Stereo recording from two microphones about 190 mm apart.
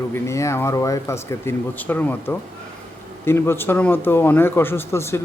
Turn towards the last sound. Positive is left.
turn(degrees=15)  # may be behind; listen again after turning